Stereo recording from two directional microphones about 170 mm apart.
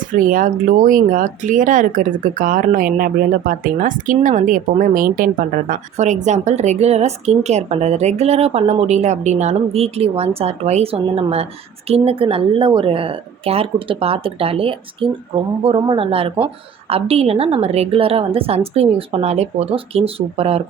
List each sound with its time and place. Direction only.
0.1 s a woman's voice: 50° right (ahead or behind); by 20.6 s 35° right (ahead or behind)